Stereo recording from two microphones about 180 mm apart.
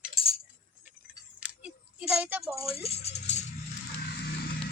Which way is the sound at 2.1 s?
5° right (ahead or behind).